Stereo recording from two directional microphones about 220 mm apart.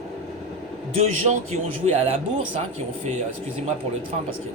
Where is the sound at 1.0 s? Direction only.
30° right (ahead or behind).